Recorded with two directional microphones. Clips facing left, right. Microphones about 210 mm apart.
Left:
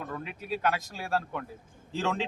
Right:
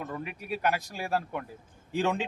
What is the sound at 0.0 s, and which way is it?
Speech, 10° right (ahead or behind).